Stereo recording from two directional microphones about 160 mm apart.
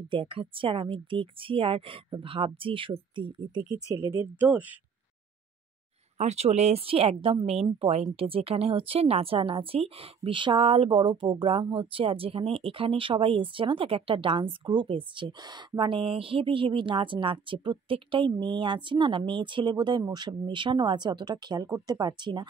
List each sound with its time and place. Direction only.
0.1 s speech: 35° right (ahead or behind)
3.9 s speech: 15° right (ahead or behind)
6.1 s speech: 45° right (ahead or behind)